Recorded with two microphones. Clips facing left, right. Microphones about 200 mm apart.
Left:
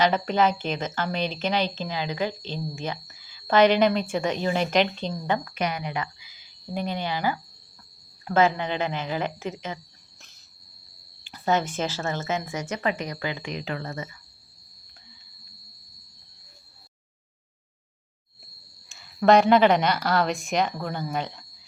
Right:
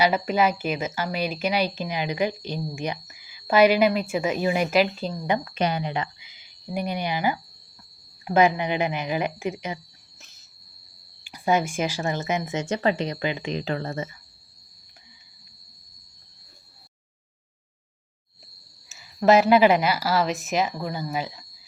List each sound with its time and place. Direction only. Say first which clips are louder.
0.0 s a woman's voice: even; 10° right (ahead or behind)
5.3 s a woman's voice: right 3 dB; 25° right (ahead or behind)
10.2 s cricket: right 2 dB; centre (ahead or behind)
11.2 s speech: right 2 dB; 10° right (ahead or behind); by 14.2 s 25° right (ahead or behind)
18.9 s speech: even; 5° right (ahead or behind)